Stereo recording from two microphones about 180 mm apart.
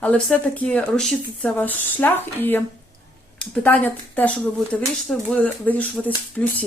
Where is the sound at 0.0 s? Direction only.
5° left (ahead or behind).